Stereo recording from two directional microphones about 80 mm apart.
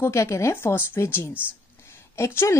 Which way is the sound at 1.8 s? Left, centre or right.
Left.